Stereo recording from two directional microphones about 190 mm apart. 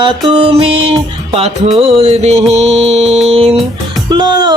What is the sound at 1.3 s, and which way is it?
Music, 30° right (ahead or behind).